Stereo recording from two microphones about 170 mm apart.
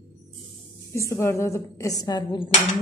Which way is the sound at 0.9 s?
15° left (ahead or behind).